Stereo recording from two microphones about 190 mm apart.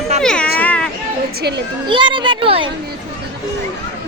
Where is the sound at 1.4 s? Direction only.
60° right (ahead or behind).